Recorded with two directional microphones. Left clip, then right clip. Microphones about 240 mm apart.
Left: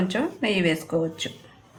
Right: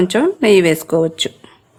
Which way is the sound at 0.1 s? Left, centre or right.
Right.